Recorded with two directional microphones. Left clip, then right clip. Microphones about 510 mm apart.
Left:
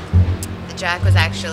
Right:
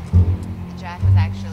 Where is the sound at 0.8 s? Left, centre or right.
Left.